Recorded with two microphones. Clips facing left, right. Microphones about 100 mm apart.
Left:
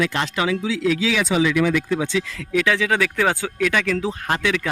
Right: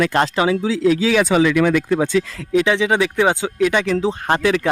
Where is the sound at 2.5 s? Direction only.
20° right (ahead or behind).